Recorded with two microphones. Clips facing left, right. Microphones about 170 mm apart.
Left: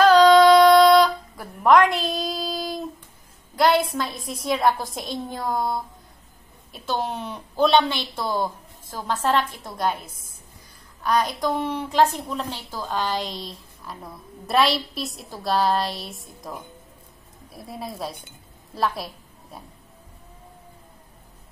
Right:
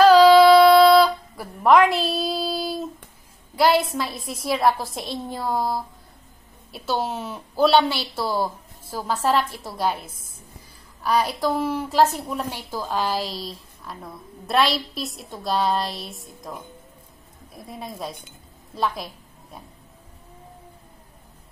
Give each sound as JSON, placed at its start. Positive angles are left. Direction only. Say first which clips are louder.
{"t": 0.0, "sound": "a sound", "louder": "right 2 dB", "side_deg": -5}
{"t": 3.5, "sound": "a woman's voice", "louder": "even", "side_deg": -5}
{"t": 10.0, "sound": "a woman's voice", "louder": "right 2 dB", "side_deg": -25}
{"t": 11.0, "sound": "a woman's voice", "louder": "right 1 dB", "side_deg": -5}